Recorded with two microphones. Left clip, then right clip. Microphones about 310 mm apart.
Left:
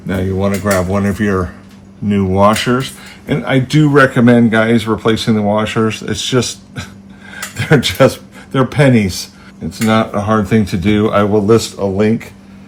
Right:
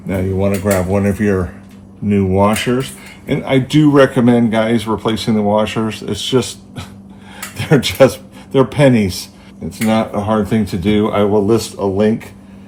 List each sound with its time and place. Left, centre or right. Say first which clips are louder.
0.1 s a man's voice: even; left
7.5 s a man's voice: left 2 dB; left